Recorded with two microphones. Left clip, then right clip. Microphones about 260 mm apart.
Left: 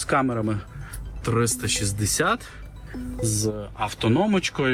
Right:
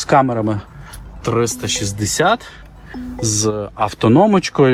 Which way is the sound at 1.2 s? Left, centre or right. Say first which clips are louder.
Right 7 dB; centre.